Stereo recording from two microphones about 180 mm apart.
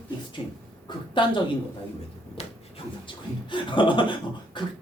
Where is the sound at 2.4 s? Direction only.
35° left (ahead or behind).